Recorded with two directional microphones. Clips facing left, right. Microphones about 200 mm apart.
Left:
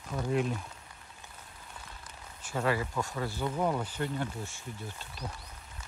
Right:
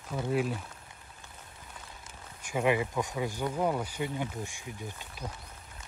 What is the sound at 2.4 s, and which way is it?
Speech, 15° right (ahead or behind).